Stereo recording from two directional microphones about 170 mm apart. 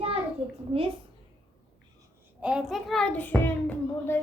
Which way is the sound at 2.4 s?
5° right (ahead or behind).